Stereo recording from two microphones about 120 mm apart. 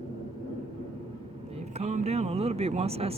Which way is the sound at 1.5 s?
65° right (ahead or behind).